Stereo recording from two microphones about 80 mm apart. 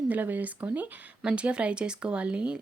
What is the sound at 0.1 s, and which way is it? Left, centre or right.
Speech, right.